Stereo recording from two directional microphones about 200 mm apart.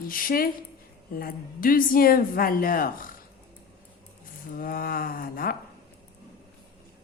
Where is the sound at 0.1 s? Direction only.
45° left (ahead or behind).